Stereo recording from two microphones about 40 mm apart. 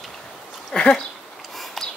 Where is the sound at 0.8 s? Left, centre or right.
Centre.